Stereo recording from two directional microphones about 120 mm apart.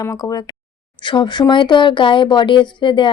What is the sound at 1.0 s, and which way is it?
Speech, 40° left (ahead or behind).